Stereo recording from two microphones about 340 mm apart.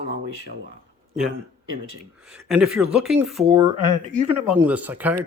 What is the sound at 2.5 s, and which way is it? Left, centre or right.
Speech, centre.